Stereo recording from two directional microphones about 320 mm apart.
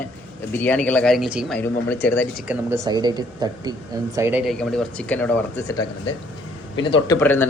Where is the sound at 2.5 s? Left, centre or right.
Centre.